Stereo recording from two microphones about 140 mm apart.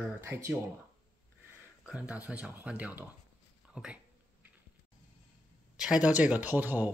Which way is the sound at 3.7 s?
5° right (ahead or behind).